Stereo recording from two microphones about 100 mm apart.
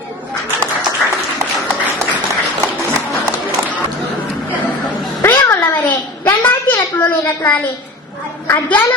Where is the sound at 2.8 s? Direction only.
25° right (ahead or behind).